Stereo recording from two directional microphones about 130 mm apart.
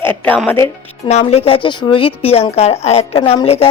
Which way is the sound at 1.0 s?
55° left (ahead or behind).